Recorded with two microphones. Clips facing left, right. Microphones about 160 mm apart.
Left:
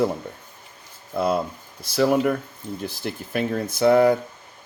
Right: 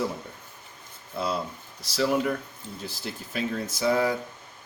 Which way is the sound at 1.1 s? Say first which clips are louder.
Left 7 dB; 55° left (ahead or behind).